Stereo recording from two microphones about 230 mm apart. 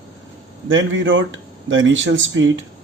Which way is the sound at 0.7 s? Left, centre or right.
Right.